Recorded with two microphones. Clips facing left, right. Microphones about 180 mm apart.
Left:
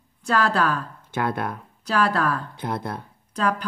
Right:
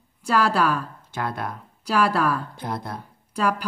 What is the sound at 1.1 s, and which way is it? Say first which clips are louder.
Speech: left 4 dB; 55° left (ahead or behind).